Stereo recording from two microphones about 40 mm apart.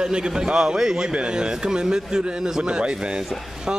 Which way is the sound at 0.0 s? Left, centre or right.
Centre.